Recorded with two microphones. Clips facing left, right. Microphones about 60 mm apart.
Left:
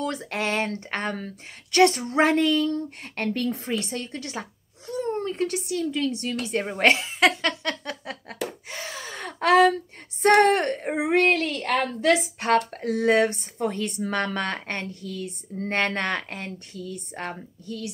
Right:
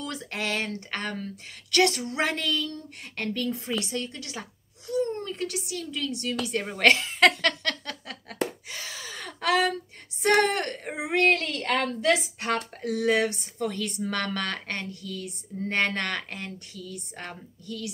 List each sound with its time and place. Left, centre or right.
0.0 s speech: left
7.1 s speech: centre
7.8 s a sound: left
8.6 s gasp: left
10.2 s speech: left
15.9 s speech: left